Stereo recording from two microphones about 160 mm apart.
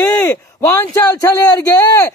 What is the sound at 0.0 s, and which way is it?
A man's voice, 10° left (ahead or behind).